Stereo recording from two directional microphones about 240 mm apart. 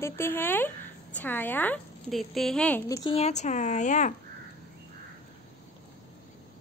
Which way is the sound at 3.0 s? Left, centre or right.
Left.